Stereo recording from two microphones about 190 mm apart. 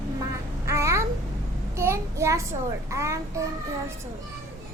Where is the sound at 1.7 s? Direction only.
15° right (ahead or behind).